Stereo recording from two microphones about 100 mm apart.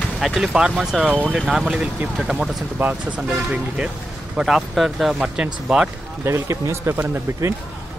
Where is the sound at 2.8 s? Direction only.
15° right (ahead or behind).